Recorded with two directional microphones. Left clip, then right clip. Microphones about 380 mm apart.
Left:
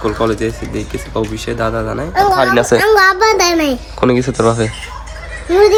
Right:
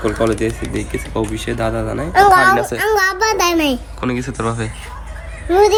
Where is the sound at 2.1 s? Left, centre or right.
Right.